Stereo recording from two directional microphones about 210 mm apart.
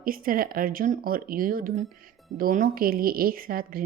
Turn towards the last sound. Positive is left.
turn(degrees=-45)  # may be behind; listen again after turning